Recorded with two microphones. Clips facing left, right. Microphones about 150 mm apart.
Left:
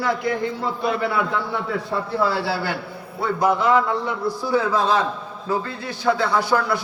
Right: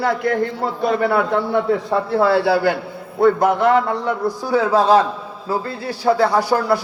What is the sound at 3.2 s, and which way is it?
A man's voice, 55° right (ahead or behind).